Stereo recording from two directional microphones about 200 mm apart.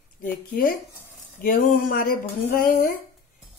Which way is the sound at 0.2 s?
45° left (ahead or behind).